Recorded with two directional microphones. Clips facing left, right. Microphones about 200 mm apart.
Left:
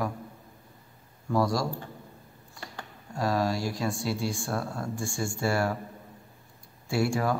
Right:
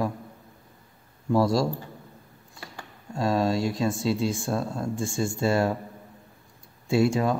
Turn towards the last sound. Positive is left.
turn(degrees=-20)  # may be behind; listen again after turning